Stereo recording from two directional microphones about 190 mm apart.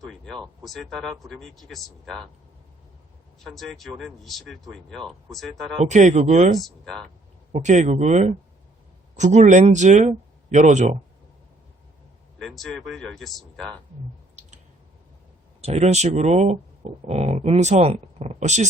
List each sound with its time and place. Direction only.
0.0 s speech: centre (ahead or behind)
3.4 s speech: centre (ahead or behind)
5.8 s speech: 40° right (ahead or behind)
6.6 s speech: centre (ahead or behind)
7.5 s speech: 40° right (ahead or behind)
12.4 s speech: centre (ahead or behind)
15.6 s speech: 35° right (ahead or behind)